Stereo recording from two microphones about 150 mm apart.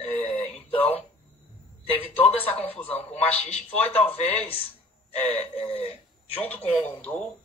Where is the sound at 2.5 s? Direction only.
10° left (ahead or behind).